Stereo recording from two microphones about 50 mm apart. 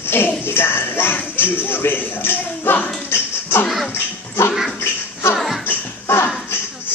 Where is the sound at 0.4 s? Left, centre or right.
Left.